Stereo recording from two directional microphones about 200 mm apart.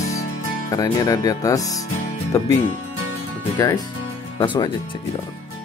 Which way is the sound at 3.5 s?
15° left (ahead or behind).